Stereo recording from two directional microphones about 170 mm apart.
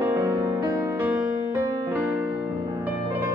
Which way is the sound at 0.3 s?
20° right (ahead or behind).